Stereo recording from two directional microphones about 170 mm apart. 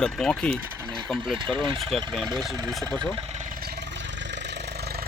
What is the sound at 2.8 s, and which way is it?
Vehicle, 25° right (ahead or behind).